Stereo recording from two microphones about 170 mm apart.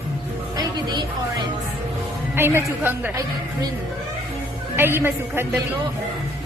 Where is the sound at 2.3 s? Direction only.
15° right (ahead or behind).